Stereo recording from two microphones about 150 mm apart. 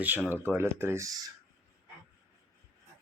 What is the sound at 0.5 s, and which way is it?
Speech, 15° right (ahead or behind).